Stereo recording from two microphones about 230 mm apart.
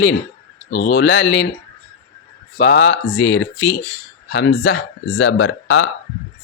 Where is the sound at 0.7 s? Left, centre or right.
Left.